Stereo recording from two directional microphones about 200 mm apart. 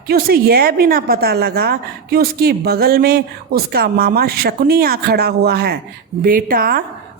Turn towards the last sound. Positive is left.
turn(degrees=-50)  # may be behind; listen again after turning